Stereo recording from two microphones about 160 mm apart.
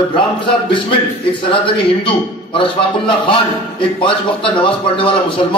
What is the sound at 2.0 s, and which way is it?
A man's voice, 35° left (ahead or behind).